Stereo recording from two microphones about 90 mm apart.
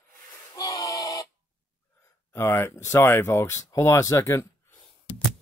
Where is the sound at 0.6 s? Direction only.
45° left (ahead or behind).